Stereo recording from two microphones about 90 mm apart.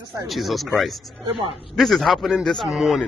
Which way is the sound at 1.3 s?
90° right.